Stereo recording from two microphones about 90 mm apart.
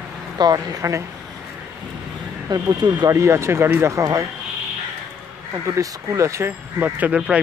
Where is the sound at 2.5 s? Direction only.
55° right (ahead or behind).